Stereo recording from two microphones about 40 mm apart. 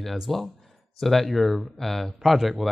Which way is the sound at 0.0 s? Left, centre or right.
Centre.